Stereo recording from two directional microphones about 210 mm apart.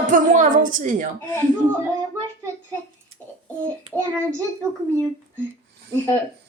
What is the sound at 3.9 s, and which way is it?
Speech, 25° right (ahead or behind).